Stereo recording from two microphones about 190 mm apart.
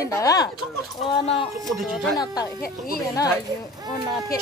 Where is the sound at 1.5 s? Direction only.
Centre (ahead or behind).